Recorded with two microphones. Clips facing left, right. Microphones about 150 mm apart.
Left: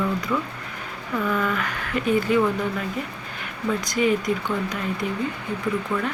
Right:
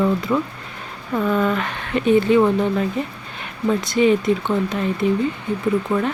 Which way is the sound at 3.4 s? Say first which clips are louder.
Right 5 dB; 25° right (ahead or behind).